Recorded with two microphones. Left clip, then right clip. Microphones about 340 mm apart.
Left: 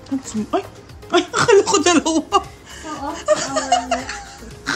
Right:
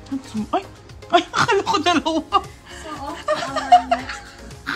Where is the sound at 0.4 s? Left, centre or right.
Centre.